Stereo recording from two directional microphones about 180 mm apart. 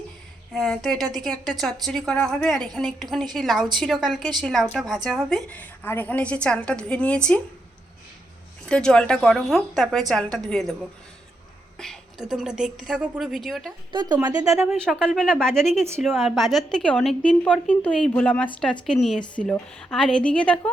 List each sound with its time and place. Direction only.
0.5 s a woman's voice: centre (ahead or behind)
8.7 s a woman's voice: 5° left (ahead or behind)
11.8 s a woman's voice: centre (ahead or behind)
13.9 s speech: 25° right (ahead or behind)
14.7 s a woman's voice: centre (ahead or behind)